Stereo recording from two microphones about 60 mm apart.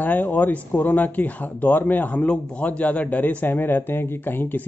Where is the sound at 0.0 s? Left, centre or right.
Left.